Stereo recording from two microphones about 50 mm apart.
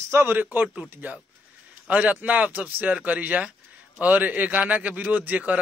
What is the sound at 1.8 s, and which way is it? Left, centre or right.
A man's voice, right.